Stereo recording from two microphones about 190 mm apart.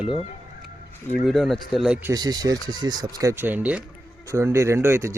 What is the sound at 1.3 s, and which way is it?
Speech, centre (ahead or behind).